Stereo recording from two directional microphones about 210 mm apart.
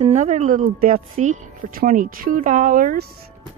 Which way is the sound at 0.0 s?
35° right (ahead or behind).